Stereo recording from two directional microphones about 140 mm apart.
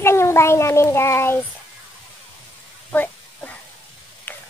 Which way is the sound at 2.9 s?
10° left (ahead or behind).